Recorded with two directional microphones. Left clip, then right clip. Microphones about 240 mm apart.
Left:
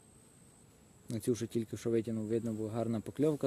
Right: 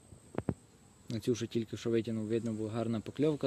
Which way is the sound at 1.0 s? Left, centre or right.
Centre.